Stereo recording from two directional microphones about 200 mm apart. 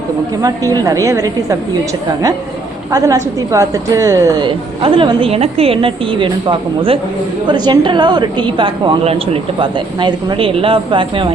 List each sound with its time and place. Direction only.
0.4 s a woman's voice: 20° right (ahead or behind)